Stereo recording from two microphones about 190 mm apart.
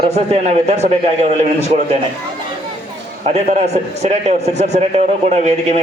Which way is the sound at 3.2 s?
35° right (ahead or behind).